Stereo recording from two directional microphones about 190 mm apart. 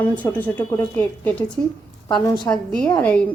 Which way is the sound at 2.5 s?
5° left (ahead or behind).